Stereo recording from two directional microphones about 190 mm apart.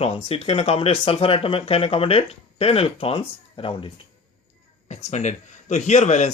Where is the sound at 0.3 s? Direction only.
30° left (ahead or behind).